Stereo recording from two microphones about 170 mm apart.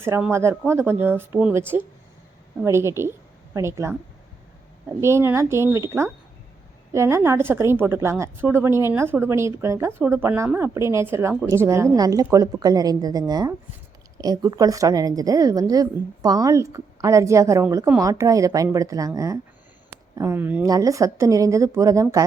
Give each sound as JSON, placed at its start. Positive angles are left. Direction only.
{"t": 0.0, "sound": "speech", "side_deg": -15}
{"t": 4.9, "sound": "a woman's voice", "side_deg": -15}